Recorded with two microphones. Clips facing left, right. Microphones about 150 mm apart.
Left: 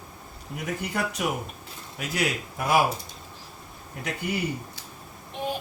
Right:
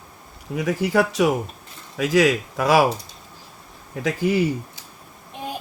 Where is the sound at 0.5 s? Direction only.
90° right.